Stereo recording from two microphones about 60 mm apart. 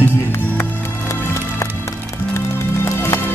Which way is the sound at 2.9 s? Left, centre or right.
Left.